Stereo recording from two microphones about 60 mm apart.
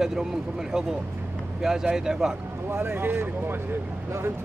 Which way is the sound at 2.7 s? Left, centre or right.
Right.